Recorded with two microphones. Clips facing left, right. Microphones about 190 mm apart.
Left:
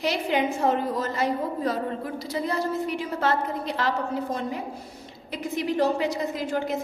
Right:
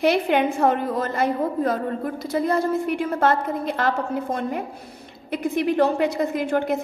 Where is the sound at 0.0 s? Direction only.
60° right (ahead or behind).